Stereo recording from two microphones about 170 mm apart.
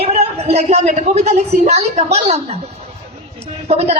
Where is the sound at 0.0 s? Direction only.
40° right (ahead or behind).